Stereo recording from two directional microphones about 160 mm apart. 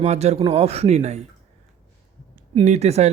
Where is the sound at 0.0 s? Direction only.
45° right (ahead or behind).